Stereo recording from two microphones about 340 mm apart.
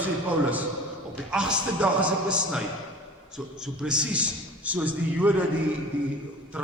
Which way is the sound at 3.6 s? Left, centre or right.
Centre.